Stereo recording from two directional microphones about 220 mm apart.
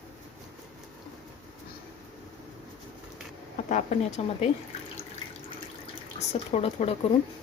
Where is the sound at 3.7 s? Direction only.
35° left (ahead or behind).